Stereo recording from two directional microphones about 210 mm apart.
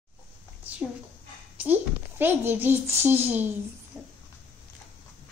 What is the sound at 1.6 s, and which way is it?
A child's voice, 10° right (ahead or behind).